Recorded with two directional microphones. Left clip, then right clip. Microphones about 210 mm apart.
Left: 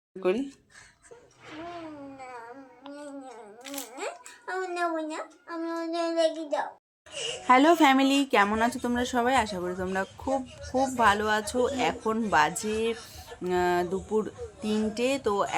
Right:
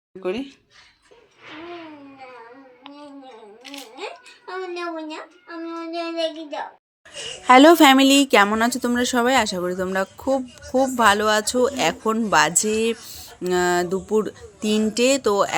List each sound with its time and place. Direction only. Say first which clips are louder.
0.2 s speech: even; centre (ahead or behind)
5.5 s child singing: right 1 dB; 10° left (ahead or behind)
7.4 s a woman's voice: right 8 dB; 30° right (ahead or behind)